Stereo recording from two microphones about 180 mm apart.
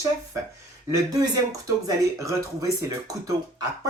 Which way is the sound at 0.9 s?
20° right (ahead or behind).